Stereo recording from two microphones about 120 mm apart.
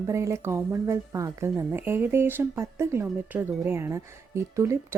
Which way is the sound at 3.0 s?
10° right (ahead or behind).